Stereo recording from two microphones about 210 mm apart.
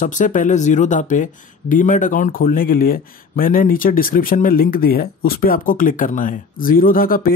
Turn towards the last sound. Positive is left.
turn(degrees=45)  # may be behind; listen again after turning